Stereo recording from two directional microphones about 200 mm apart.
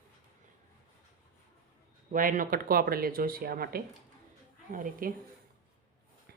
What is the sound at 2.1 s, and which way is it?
Speech, 45° right (ahead or behind).